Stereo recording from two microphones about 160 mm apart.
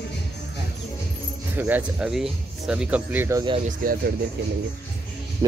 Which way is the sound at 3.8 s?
65° right (ahead or behind).